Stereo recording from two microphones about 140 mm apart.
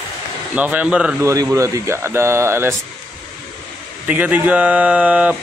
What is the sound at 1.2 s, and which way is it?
Speech, 20° right (ahead or behind).